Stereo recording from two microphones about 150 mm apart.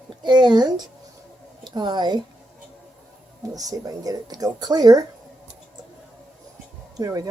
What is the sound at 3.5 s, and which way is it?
Speech, 25° right (ahead or behind).